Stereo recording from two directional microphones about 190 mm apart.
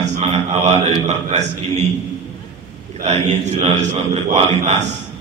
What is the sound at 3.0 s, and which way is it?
A man's voice, 35° right (ahead or behind).